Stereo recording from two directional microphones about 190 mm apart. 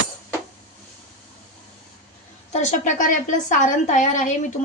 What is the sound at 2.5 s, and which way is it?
A woman's voice, 40° left (ahead or behind).